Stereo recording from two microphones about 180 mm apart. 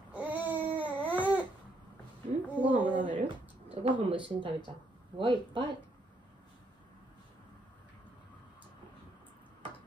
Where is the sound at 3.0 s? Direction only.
45° right (ahead or behind).